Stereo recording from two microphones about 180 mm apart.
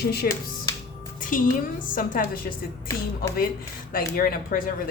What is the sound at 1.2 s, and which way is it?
Music, 50° left (ahead or behind).